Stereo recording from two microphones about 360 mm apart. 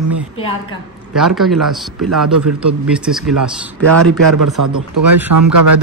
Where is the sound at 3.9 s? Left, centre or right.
Right.